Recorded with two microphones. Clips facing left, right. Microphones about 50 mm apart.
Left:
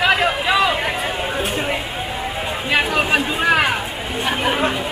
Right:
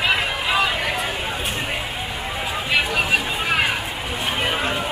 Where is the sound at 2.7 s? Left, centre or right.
Left.